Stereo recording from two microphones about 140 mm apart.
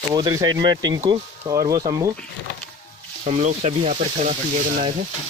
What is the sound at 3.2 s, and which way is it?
Speech, 55° right (ahead or behind).